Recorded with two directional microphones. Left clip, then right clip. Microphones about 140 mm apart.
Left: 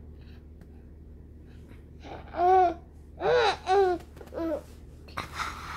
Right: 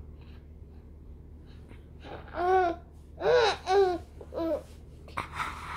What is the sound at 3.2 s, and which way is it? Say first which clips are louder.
Gasp: even; 30° left (ahead or behind).